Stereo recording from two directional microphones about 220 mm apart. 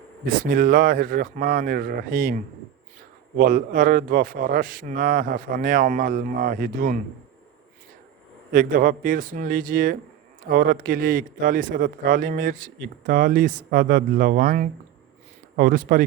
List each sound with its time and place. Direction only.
0.5 s a man's voice: 40° right (ahead or behind)
8.5 s a man's voice: 40° right (ahead or behind)